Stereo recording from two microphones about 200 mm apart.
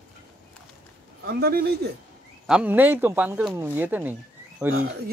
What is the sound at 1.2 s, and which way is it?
Speech, 50° right (ahead or behind).